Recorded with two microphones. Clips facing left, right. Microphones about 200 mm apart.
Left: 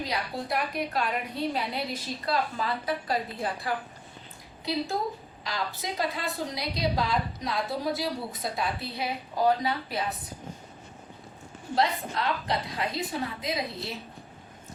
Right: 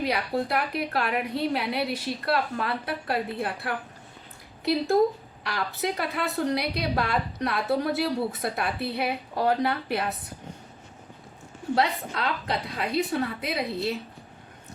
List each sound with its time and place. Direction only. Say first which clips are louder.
0.0 s a woman's voice: right 6 dB; 65° right (ahead or behind)
5.4 s a woman's voice: right 5 dB; 65° right (ahead or behind)
11.7 s a woman's voice: right 2 dB; 65° right (ahead or behind)